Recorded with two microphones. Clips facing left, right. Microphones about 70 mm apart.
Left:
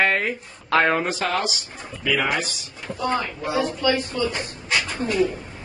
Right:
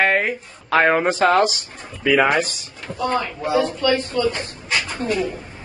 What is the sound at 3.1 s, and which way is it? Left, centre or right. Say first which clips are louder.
Speech: right 3 dB; centre.